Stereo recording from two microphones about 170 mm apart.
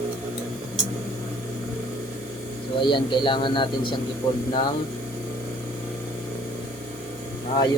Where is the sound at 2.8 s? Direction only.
30° left (ahead or behind).